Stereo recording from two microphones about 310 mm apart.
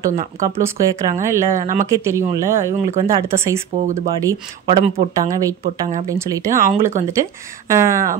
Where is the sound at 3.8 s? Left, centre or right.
Right.